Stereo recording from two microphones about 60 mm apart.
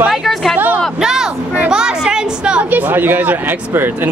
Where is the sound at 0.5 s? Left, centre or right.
Right.